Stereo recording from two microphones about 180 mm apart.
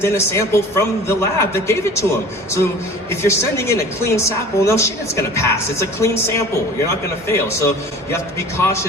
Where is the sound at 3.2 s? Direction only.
15° left (ahead or behind).